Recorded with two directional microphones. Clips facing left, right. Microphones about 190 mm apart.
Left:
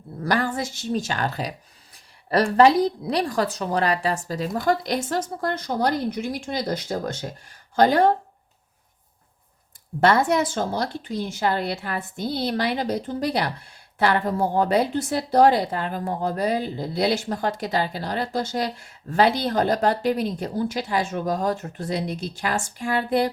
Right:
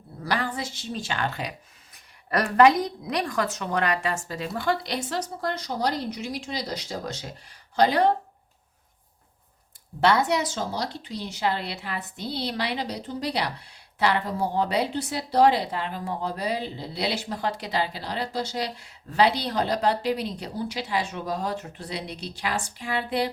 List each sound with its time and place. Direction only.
0.3 s a woman's voice: 45° left (ahead or behind)
10.0 s a woman's voice: 50° left (ahead or behind)